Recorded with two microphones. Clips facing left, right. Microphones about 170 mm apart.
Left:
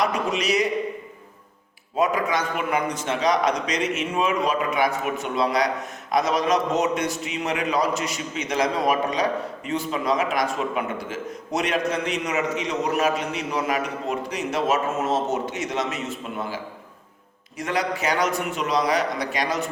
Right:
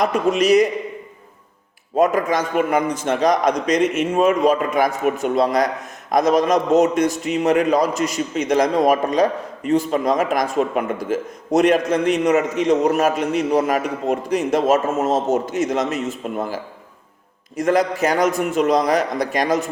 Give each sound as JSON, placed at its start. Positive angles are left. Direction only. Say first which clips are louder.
{"t": 0.0, "sound": "a man's voice", "louder": "right 6 dB", "side_deg": -50}
{"t": 2.0, "sound": "a man's voice", "louder": "right 5 dB", "side_deg": -45}
{"t": 17.6, "sound": "a man's voice", "louder": "right 8 dB", "side_deg": -45}